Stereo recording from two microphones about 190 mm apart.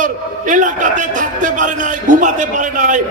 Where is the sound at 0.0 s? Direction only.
40° right (ahead or behind).